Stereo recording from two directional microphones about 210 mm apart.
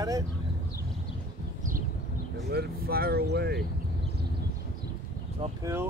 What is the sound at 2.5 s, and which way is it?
Speech, 45° right (ahead or behind).